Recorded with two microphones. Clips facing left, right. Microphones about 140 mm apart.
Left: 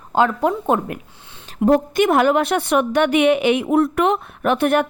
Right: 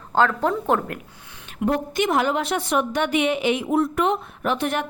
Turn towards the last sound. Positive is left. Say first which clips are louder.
# left 7 dB
turn(degrees=60)  # may be behind; listen again after turning